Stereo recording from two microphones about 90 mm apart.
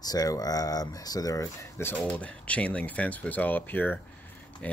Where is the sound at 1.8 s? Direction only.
20° left (ahead or behind).